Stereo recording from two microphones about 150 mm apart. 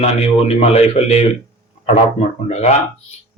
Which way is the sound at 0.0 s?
45° left (ahead or behind).